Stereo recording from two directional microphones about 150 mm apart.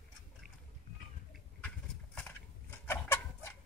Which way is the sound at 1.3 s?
5° left (ahead or behind).